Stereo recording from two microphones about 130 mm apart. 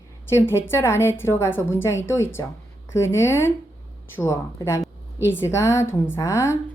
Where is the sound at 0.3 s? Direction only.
20° left (ahead or behind).